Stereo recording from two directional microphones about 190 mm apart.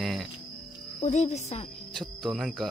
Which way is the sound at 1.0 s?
40° left (ahead or behind).